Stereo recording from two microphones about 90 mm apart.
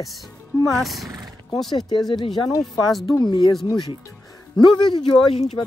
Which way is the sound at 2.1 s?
55° left (ahead or behind).